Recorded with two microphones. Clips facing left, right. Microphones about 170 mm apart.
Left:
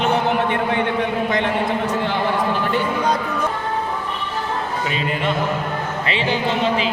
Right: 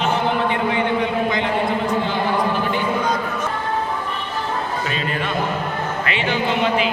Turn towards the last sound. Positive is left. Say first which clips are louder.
# left 1 dB
turn(degrees=30)  # may be behind; listen again after turning